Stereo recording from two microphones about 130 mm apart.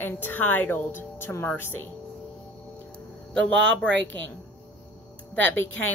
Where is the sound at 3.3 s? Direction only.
10° left (ahead or behind).